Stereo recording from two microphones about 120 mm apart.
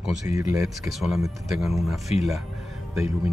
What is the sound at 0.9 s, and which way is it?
Speech, centre (ahead or behind).